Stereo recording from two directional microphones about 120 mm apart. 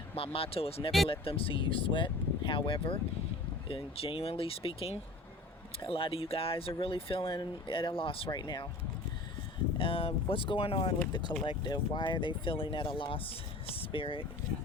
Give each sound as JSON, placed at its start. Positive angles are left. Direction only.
{"t": 0.2, "sound": "speech", "side_deg": 55}
{"t": 9.7, "sound": "speech", "side_deg": 50}
{"t": 11.4, "sound": "speech", "side_deg": 40}